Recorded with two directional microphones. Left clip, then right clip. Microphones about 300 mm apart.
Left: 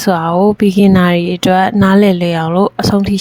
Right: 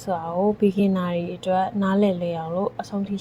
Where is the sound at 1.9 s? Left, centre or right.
Left.